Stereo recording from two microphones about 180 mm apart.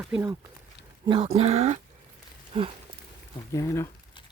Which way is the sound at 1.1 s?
30° right (ahead or behind).